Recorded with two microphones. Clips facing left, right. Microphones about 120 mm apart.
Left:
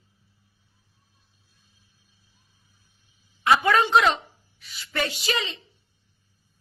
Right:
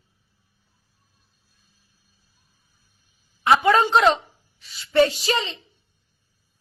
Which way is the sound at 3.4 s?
25° right (ahead or behind).